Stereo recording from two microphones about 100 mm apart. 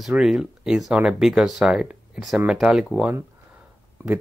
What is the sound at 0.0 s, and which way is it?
Speech, 5° right (ahead or behind).